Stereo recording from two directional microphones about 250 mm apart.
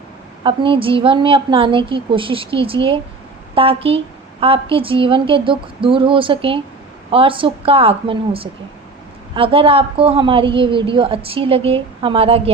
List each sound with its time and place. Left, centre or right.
0.4 s a woman's voice: right